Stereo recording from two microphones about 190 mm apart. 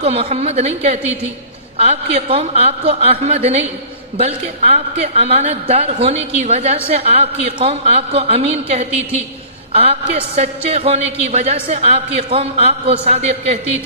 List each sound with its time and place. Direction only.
0.0 s a woman's voice: 30° right (ahead or behind)